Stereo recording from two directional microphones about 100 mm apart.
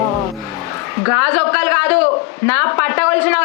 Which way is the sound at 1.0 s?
25° left (ahead or behind).